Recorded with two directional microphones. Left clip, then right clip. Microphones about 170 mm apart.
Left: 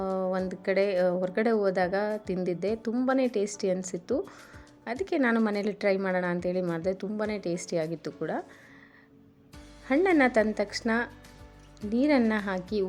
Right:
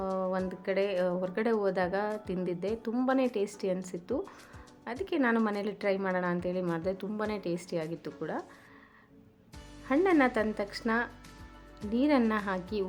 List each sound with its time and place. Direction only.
0.0 s a woman's voice: 20° left (ahead or behind)
9.8 s a woman's voice: 20° left (ahead or behind)